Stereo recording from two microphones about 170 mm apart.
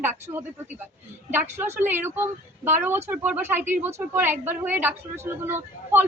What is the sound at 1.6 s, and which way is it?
Speech, 10° right (ahead or behind).